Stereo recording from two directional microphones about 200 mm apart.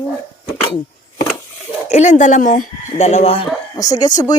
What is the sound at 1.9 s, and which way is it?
Speech, 35° left (ahead or behind).